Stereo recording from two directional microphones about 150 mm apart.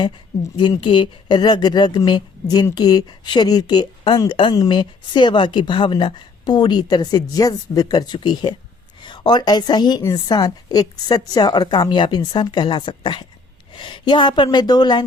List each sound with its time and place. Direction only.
0.5 s a woman's voice: 30° left (ahead or behind)